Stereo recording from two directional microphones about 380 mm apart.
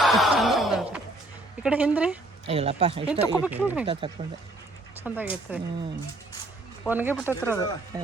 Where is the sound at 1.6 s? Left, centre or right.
Centre.